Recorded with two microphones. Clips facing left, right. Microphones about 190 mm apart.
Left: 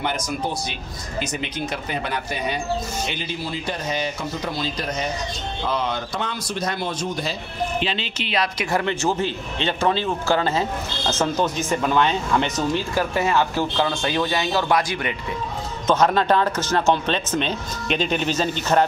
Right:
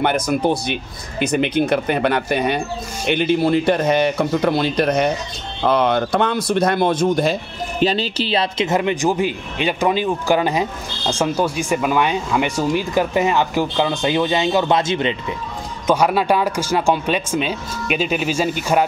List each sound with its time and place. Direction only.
0.0 s a man's voice: 60° right (ahead or behind)
7.8 s a man's voice: 40° right (ahead or behind); by 15.1 s 25° right (ahead or behind)
15.9 s a man's voice: 10° right (ahead or behind)